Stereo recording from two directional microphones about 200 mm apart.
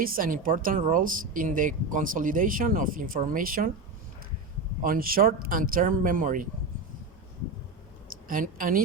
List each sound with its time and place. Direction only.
0.0 s speech: 45° right (ahead or behind)
4.8 s speech: 45° right (ahead or behind)
8.1 s a sound: 45° right (ahead or behind)